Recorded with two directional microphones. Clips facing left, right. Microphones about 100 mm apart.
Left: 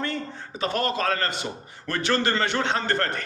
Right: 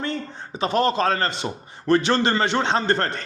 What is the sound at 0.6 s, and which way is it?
A man's voice, 20° right (ahead or behind).